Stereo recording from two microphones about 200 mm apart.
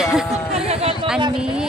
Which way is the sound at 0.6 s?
30° right (ahead or behind).